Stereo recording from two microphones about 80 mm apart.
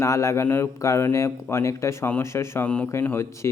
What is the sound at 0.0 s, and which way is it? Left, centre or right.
Speech, left.